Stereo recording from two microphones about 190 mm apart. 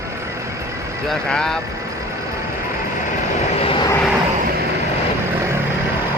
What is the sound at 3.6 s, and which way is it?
Vehicle, 30° left (ahead or behind).